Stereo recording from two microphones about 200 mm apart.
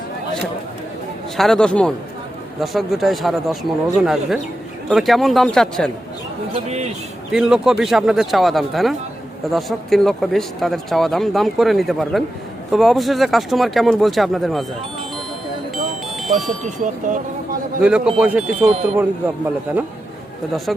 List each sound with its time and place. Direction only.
1.4 s speech: 5° left (ahead or behind)
7.3 s speech: 5° right (ahead or behind)
16.2 s speech: centre (ahead or behind)
16.6 s speech: 40° right (ahead or behind)
17.8 s speech: 5° right (ahead or behind)
20.7 s speech: centre (ahead or behind)